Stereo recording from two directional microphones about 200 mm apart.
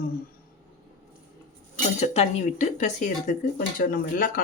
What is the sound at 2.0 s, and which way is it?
Speech, 35° left (ahead or behind).